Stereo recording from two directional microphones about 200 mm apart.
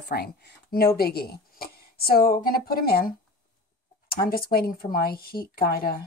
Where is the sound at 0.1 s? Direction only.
50° left (ahead or behind).